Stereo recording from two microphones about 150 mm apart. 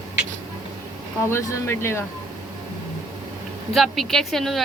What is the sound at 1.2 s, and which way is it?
Speech, 15° left (ahead or behind).